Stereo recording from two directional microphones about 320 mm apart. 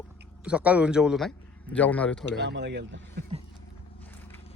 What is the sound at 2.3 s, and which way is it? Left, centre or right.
Speech, right.